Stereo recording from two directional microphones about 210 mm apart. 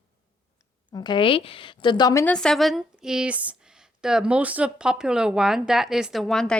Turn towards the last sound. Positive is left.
turn(degrees=5)  # may be behind; listen again after turning